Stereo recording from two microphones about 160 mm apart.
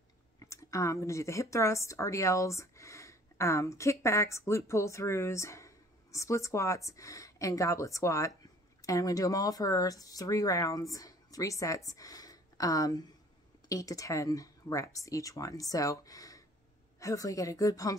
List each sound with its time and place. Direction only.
0.4 s speech: 20° left (ahead or behind)